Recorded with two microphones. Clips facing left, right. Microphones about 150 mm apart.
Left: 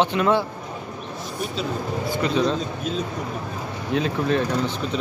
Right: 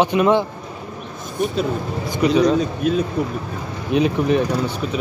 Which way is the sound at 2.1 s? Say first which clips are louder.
Right 6 dB; 15° right (ahead or behind).